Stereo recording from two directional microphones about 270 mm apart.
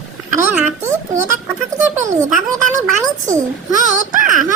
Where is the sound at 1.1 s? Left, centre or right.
Right.